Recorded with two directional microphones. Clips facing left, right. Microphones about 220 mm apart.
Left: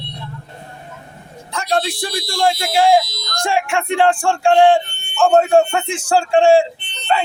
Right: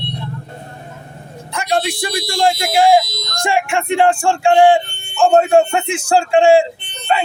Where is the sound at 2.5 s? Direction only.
10° right (ahead or behind).